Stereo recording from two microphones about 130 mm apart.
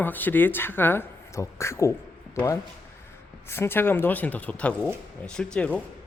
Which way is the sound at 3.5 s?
20° left (ahead or behind).